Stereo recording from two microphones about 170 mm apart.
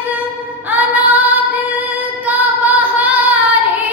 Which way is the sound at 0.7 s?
10° right (ahead or behind).